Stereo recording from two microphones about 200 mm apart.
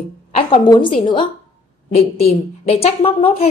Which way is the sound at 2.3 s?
30° left (ahead or behind).